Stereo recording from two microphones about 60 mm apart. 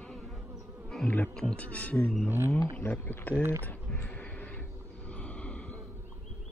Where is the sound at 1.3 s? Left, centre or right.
Centre.